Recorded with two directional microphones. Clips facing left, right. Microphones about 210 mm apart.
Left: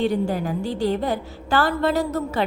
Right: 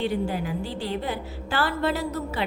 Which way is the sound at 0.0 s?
45° left (ahead or behind).